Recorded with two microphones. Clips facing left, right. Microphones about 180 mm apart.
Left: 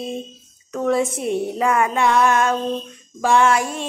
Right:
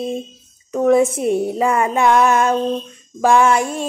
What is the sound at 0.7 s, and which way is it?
Music, 15° right (ahead or behind).